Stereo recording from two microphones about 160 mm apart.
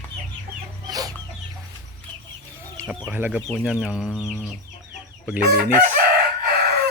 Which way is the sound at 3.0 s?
10° right (ahead or behind).